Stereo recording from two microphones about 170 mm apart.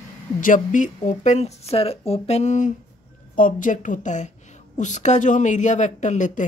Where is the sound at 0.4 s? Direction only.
50° left (ahead or behind).